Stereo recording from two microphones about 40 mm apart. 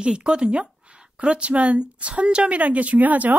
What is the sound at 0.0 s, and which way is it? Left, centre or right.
A woman's voice, right.